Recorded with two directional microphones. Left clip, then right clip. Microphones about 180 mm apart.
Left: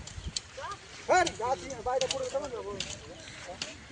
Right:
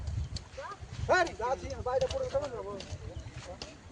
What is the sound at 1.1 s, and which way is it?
Speech, 30° left (ahead or behind).